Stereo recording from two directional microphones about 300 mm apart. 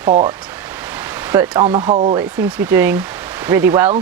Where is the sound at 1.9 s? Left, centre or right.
Right.